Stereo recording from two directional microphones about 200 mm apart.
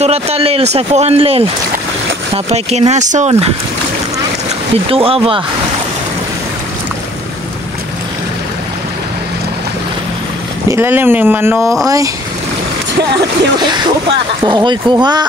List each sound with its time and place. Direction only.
0.0 s a man's voice: 30° right (ahead or behind)
4.8 s speech: 30° right (ahead or behind)
10.7 s speech: 10° right (ahead or behind)
14.4 s speech: 25° right (ahead or behind)